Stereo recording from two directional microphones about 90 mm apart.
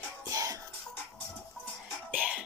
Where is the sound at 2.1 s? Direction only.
15° right (ahead or behind).